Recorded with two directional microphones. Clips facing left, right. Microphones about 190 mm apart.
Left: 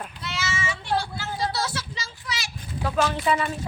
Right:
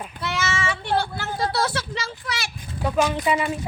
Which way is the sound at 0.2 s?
55° right (ahead or behind).